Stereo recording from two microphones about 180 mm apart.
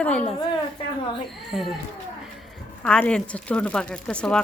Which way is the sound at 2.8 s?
5° left (ahead or behind).